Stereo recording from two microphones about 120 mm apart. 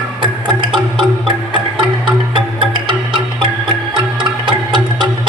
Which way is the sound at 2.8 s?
45° right (ahead or behind).